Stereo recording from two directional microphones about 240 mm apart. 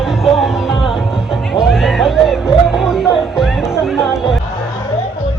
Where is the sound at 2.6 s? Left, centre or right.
Centre.